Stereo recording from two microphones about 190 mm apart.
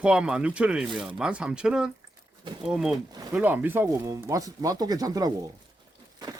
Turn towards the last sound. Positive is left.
turn(degrees=-20)  # may be behind; listen again after turning